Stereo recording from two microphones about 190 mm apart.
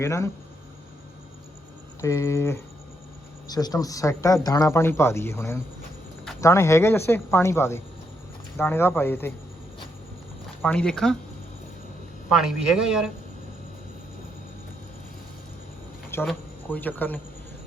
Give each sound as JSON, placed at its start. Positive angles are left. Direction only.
{"t": 0.0, "sound": "speech", "side_deg": 15}
{"t": 2.0, "sound": "speech", "side_deg": 15}
{"t": 10.6, "sound": "a man's voice", "side_deg": 5}
{"t": 12.3, "sound": "a man's voice", "side_deg": 0}
{"t": 16.2, "sound": "speech", "side_deg": 10}